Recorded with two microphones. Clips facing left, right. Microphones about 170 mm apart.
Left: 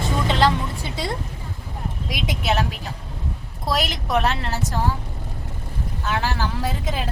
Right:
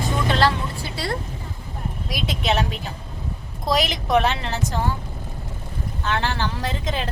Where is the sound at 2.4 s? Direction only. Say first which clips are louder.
Right 1 dB; centre (ahead or behind).